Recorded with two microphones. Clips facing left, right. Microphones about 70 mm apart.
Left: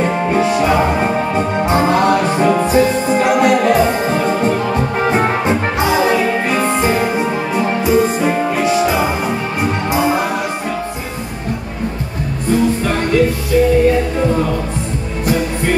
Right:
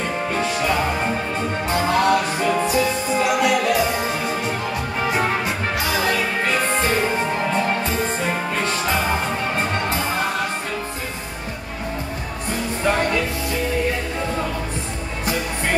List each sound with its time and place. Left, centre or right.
2.4 s music: left
5.1 s music: left